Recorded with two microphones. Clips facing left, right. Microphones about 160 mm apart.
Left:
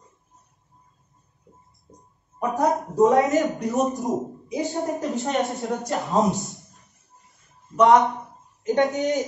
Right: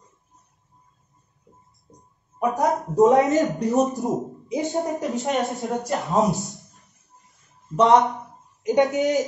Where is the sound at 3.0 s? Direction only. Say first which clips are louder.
Right 2 dB; 20° right (ahead or behind).